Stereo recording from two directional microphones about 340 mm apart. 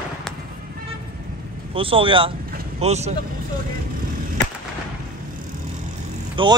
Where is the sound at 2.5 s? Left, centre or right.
Centre.